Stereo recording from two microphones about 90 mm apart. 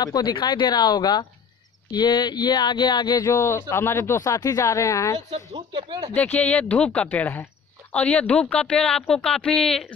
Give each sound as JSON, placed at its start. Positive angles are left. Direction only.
{"t": 0.0, "sound": "speech", "side_deg": 50}
{"t": 3.3, "sound": "speech", "side_deg": 30}
{"t": 5.7, "sound": "speech", "side_deg": -70}
{"t": 6.1, "sound": "speech", "side_deg": 15}